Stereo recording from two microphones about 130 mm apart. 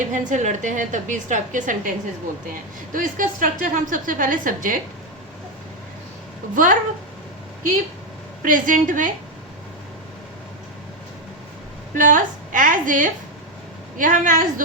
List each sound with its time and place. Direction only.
0.0 s a woman's voice: 75° right (ahead or behind)
2.9 s a woman's voice: 90° right
6.5 s a woman's voice: 90° right
8.4 s a woman's voice: 90° right
11.9 s a woman's voice: 85° right